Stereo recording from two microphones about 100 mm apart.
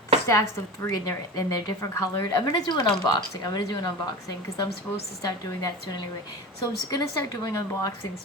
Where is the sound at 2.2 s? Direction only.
45° left (ahead or behind).